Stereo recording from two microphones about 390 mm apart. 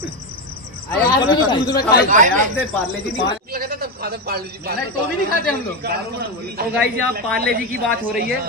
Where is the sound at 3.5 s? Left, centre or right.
Right.